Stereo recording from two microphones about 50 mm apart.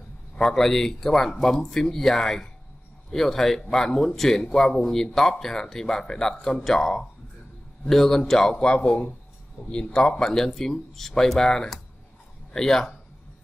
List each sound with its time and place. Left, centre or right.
0.4 s speech: centre